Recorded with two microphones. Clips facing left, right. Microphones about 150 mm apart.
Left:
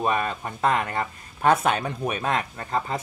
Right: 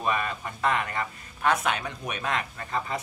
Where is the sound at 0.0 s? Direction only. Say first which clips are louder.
Left 4 dB; 35° left (ahead or behind).